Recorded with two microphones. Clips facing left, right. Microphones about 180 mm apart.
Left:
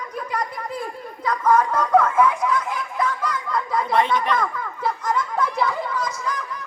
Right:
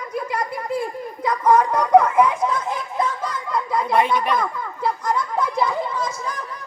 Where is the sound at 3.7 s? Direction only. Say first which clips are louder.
Right 1 dB; 10° right (ahead or behind).